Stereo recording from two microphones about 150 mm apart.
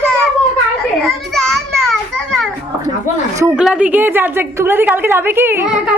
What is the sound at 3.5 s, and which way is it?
A woman's voice, 5° right (ahead or behind).